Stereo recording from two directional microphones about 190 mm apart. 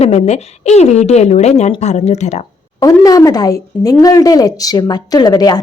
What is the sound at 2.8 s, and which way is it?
A woman's voice, 20° left (ahead or behind).